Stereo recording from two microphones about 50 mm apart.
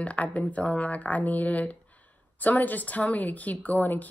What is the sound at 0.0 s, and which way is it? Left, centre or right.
A woman's voice, left.